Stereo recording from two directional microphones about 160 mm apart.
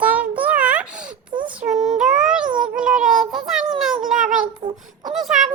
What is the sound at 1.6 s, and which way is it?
Child singing, 45° right (ahead or behind).